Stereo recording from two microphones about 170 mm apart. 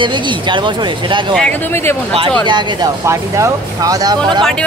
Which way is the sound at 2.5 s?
25° right (ahead or behind).